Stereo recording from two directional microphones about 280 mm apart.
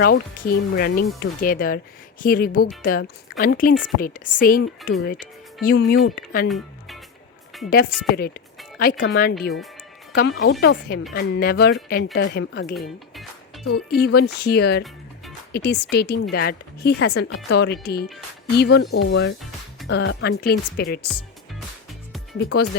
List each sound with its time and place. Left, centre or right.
0.0 s speech: left
5.6 s speech: left
6.5 s music: centre
7.7 s speech: left